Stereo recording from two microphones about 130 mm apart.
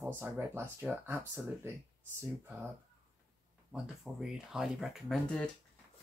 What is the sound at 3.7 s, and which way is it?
Speech, 5° right (ahead or behind).